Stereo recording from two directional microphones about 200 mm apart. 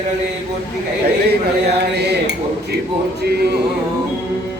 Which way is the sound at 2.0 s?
55° right (ahead or behind).